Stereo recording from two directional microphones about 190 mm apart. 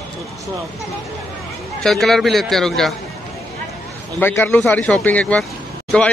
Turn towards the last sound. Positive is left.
turn(degrees=5)  # may be behind; listen again after turning